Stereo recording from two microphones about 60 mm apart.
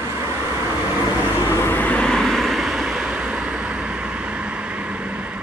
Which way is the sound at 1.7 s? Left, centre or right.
Left.